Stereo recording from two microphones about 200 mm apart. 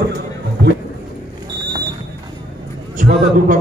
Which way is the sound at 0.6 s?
55° right (ahead or behind).